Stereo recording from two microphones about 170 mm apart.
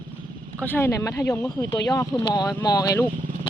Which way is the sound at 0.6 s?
10° left (ahead or behind).